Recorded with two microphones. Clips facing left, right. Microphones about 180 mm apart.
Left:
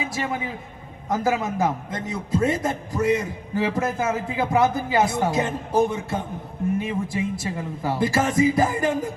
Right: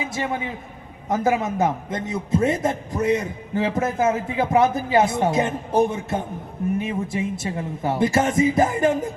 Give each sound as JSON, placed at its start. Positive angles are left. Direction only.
{"t": 0.1, "sound": "a man's voice", "side_deg": -25}